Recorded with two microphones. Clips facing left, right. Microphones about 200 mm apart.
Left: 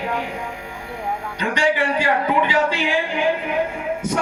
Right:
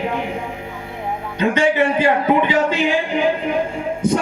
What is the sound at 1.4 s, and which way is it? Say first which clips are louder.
Music: right 5 dB; 20° right (ahead or behind).